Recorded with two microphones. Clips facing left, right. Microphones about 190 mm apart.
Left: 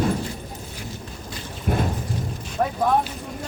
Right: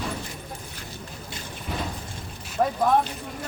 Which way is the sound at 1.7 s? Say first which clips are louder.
Left 8 dB; 55° left (ahead or behind).